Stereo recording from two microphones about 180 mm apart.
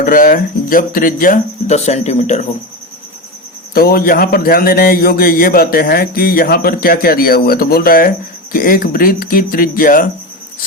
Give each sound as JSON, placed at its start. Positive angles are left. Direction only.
{"t": 0.0, "sound": "speech", "side_deg": 50}
{"t": 3.8, "sound": "a man's voice", "side_deg": 55}